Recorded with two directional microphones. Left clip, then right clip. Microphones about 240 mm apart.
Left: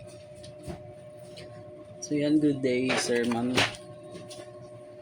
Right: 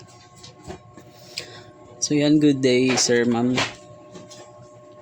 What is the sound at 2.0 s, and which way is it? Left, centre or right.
Speech, right.